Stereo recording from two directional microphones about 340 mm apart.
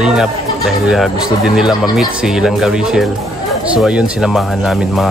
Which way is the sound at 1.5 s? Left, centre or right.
Centre.